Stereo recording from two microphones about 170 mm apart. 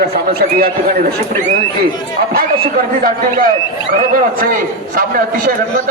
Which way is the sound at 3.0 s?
55° right (ahead or behind).